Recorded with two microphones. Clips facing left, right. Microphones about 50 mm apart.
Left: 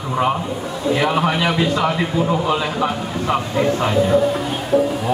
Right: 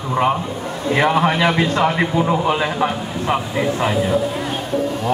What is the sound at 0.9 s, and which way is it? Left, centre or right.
Speech, right.